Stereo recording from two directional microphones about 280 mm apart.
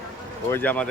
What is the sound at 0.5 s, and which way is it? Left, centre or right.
Speech, centre.